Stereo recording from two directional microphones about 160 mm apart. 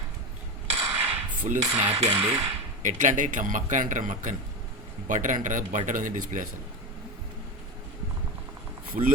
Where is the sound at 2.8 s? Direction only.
50° right (ahead or behind).